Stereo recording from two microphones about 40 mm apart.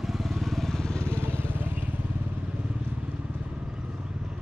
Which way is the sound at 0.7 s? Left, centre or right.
Centre.